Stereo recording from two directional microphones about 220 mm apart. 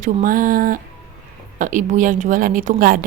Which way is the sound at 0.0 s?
40° right (ahead or behind).